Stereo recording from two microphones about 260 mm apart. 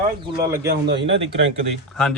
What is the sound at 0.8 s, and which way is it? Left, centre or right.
Speech, right.